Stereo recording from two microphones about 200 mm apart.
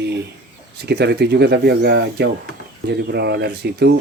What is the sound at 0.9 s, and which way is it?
Speech, 55° right (ahead or behind).